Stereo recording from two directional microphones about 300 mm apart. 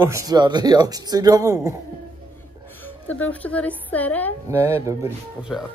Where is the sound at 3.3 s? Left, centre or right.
Centre.